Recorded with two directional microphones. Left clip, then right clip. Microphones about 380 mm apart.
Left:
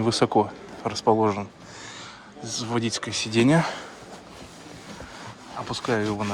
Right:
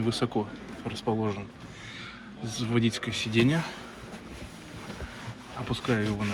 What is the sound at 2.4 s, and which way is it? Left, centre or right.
Speech, centre.